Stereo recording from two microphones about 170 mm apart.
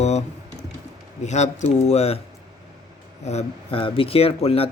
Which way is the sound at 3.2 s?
40° left (ahead or behind).